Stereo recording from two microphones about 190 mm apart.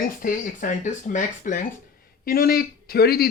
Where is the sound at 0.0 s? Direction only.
45° left (ahead or behind).